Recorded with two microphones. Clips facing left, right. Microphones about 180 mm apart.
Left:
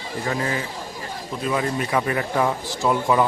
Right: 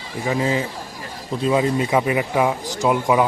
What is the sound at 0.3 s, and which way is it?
Speech, 20° right (ahead or behind).